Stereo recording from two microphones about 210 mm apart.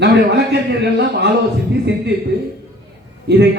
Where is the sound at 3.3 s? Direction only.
55° right (ahead or behind).